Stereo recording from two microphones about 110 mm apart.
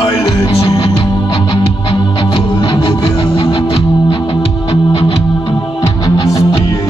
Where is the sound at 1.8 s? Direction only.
45° left (ahead or behind).